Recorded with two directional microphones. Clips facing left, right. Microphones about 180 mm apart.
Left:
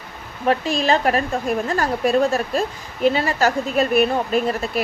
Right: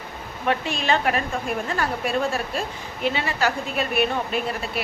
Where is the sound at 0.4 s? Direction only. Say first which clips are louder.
Left 5 dB; 35° left (ahead or behind).